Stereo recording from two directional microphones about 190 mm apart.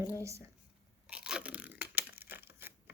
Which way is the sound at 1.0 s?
5° right (ahead or behind).